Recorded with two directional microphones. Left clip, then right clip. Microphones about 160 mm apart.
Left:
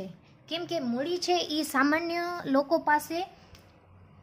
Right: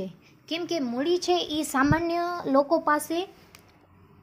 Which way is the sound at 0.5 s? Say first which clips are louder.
Right 2 dB; 25° right (ahead or behind).